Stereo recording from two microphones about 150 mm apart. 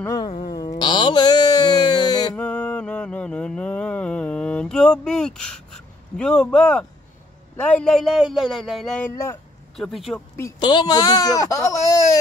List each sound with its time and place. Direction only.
0.0 s speech: 20° left (ahead or behind)
0.6 s a sound: 30° left (ahead or behind)
2.3 s mantra: 10° left (ahead or behind)
7.5 s speech: 10° left (ahead or behind)
9.1 s speech: 20° left (ahead or behind)
9.8 s speech: centre (ahead or behind)
10.6 s speech: 30° left (ahead or behind)